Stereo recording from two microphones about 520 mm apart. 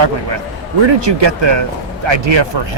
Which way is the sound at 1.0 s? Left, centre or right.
Right.